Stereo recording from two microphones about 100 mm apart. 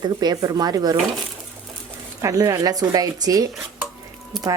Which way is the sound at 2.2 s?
35° right (ahead or behind).